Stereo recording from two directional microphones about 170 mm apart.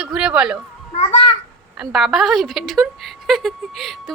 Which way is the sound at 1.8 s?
Centre (ahead or behind).